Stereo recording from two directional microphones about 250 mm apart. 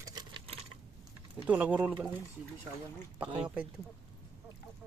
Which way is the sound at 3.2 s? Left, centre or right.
Centre.